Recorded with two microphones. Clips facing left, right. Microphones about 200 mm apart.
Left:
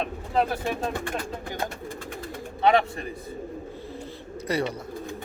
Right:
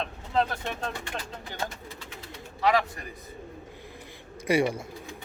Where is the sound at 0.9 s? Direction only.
50° left (ahead or behind).